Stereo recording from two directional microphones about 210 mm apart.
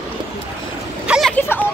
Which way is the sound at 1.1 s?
Centre (ahead or behind).